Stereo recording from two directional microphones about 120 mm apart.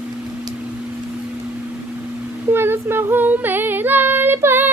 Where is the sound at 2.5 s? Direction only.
20° right (ahead or behind).